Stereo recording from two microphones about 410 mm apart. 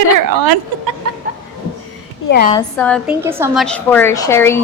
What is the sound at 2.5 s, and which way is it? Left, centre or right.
A woman's voice, centre.